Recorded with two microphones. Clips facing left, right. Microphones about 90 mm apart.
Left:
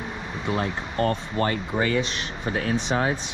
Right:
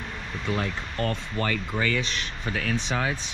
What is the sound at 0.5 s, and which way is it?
Speech, 35° left (ahead or behind).